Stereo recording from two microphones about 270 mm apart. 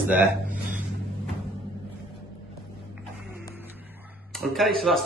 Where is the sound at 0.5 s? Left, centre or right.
Right.